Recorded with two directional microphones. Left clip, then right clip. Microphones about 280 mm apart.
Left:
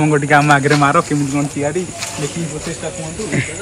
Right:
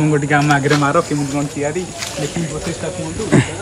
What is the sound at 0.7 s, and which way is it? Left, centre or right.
Speech, left.